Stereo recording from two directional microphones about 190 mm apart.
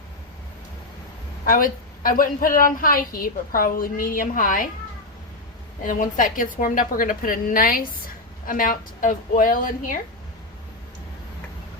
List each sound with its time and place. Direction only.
1.5 s a woman's voice: 45° left (ahead or behind)
5.8 s a woman's voice: 45° left (ahead or behind)